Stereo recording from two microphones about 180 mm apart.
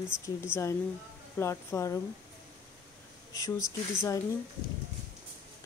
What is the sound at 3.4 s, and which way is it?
Speech, 15° left (ahead or behind).